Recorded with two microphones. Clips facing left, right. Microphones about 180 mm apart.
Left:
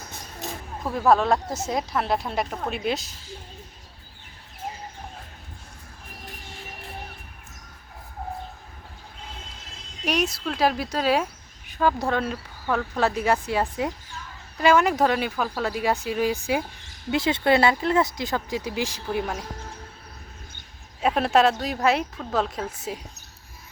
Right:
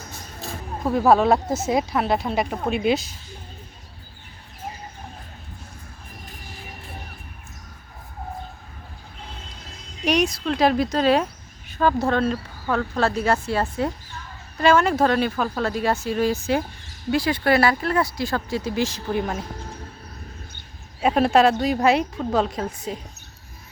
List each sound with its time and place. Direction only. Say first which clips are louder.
0.9 s a woman's voice: right 3 dB; 5° right (ahead or behind)
10.1 s a woman's voice: right 4 dB; 5° left (ahead or behind)
21.0 s a woman's voice: right 3 dB; 5° right (ahead or behind)